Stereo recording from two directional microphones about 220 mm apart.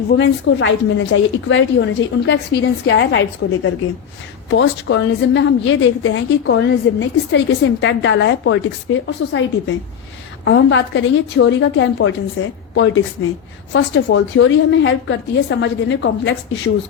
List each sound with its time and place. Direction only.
0.2 s a woman's voice: 55° left (ahead or behind)